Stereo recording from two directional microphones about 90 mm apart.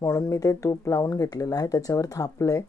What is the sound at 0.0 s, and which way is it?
Speech, 35° left (ahead or behind).